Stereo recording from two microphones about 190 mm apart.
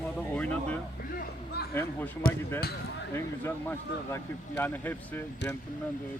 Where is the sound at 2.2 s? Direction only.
50° left (ahead or behind).